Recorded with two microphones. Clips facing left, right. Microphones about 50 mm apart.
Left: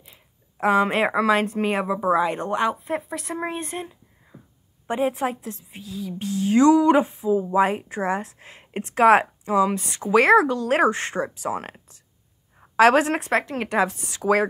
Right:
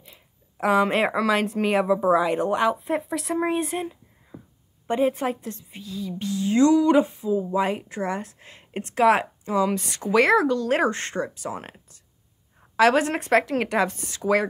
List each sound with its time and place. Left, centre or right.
0.0 s a sound: centre
1.6 s speech: centre
4.3 s a sound: right
4.8 s speech: centre
5.9 s speech: left
9.8 s speech: centre
10.1 s speech: left
12.7 s a woman's voice: left
13.2 s speech: centre